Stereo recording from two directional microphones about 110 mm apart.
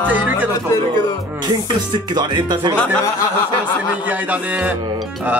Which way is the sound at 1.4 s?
40° right (ahead or behind).